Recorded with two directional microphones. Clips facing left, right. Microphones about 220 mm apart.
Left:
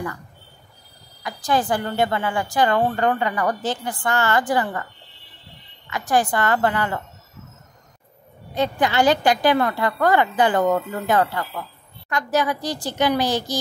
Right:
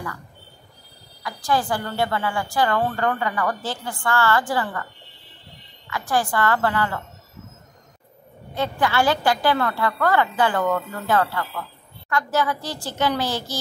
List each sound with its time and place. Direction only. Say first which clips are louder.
1.2 s a woman's voice: left 1 dB; 20° left (ahead or behind)
5.9 s a woman's voice: left 3 dB; 20° left (ahead or behind)
8.5 s a woman's voice: left 2 dB; 20° left (ahead or behind)